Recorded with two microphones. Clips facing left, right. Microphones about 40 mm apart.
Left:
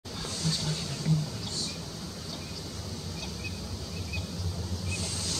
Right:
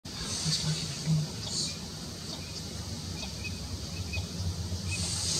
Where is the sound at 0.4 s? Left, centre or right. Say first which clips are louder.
Left 2 dB; centre.